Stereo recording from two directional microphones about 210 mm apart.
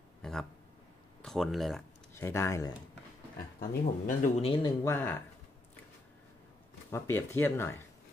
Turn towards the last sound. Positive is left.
turn(degrees=10)  # may be behind; listen again after turning